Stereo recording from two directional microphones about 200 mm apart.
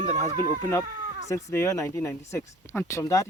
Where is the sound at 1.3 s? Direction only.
15° left (ahead or behind).